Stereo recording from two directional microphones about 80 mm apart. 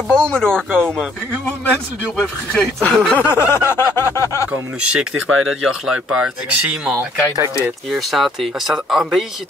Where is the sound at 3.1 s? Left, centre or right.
Left.